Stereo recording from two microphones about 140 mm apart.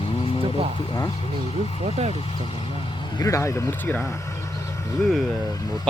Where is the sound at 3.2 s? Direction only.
20° left (ahead or behind).